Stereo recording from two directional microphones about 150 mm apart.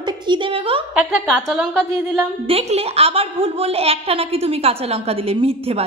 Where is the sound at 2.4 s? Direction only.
40° right (ahead or behind).